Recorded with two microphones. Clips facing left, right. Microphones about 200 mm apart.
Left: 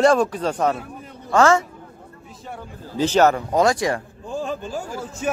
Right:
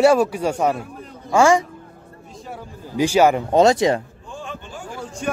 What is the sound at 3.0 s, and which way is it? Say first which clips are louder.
Speech: right 1 dB; 10° right (ahead or behind).